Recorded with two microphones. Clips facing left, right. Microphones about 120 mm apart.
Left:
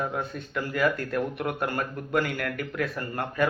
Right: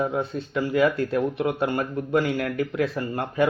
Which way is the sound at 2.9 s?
15° right (ahead or behind).